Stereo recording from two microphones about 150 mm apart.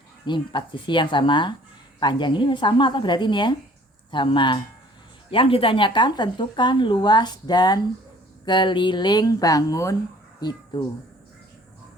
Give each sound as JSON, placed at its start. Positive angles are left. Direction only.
{"t": 0.3, "sound": "speech", "side_deg": 30}